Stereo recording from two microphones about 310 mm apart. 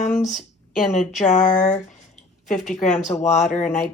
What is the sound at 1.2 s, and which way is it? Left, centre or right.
Speech, left.